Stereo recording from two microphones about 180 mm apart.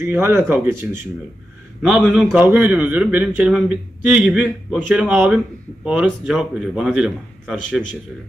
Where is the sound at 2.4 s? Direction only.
10° right (ahead or behind).